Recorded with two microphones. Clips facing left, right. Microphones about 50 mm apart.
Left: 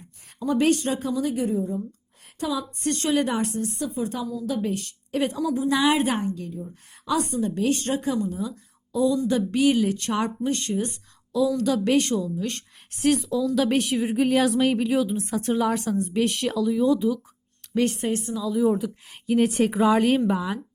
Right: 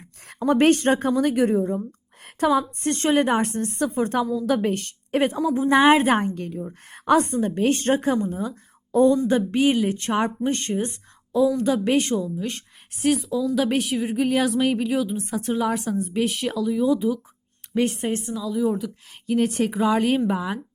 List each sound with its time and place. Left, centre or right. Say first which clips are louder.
0.3 s a woman's voice: right 4 dB; right
2.2 s speech: right 8 dB; right
2.8 s a woman's voice: left 1 dB; right
6.1 s a woman's voice: right 3 dB; right
18.3 s a woman's voice: left 3 dB; centre